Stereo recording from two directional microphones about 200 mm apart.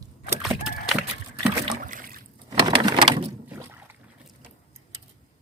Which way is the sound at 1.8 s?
45° right (ahead or behind).